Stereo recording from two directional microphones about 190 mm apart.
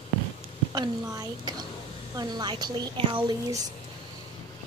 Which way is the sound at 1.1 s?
20° right (ahead or behind).